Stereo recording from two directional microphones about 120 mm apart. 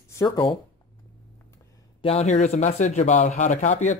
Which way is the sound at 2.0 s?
60° left (ahead or behind).